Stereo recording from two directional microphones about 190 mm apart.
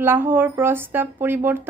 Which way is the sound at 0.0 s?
10° right (ahead or behind).